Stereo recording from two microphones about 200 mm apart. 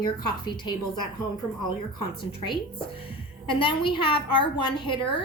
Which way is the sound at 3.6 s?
25° left (ahead or behind).